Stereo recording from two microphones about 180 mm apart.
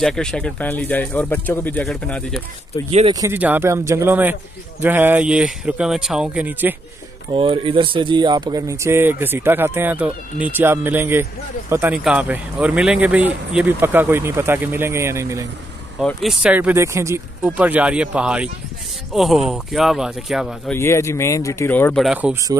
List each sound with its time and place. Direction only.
0.0 s speech: 5° left (ahead or behind)
3.1 s speech: 20° right (ahead or behind)
7.3 s speech: 30° right (ahead or behind)
16.0 s speech: centre (ahead or behind)
20.7 s speech: 15° left (ahead or behind)
22.0 s speech: 5° right (ahead or behind)